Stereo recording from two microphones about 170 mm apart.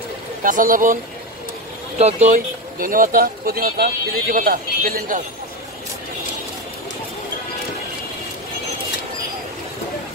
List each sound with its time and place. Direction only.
0.4 s speech: 50° right (ahead or behind)
2.0 s speech: 40° right (ahead or behind); by 5.2 s 55° right (ahead or behind)